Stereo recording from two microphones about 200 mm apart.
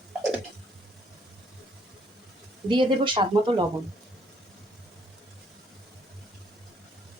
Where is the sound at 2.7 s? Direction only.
25° right (ahead or behind).